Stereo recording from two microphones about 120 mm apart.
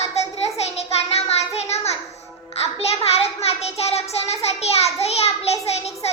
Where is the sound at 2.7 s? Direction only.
55° left (ahead or behind).